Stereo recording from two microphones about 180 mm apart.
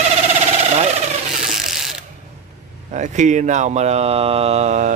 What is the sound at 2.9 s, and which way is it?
A man's voice, 40° right (ahead or behind).